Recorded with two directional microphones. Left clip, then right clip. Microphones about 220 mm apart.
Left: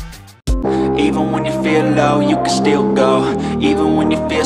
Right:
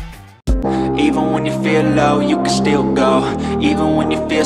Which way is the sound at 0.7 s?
Centre (ahead or behind).